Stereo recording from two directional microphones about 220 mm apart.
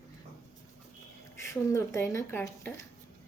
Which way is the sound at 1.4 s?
15° left (ahead or behind).